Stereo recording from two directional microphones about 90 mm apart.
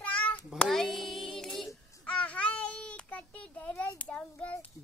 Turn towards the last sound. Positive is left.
turn(degrees=15)  # may be behind; listen again after turning